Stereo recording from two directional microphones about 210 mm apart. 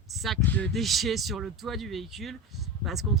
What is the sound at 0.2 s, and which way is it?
Speech, 5° left (ahead or behind).